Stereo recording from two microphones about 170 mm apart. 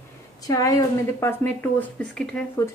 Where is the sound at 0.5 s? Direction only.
20° left (ahead or behind).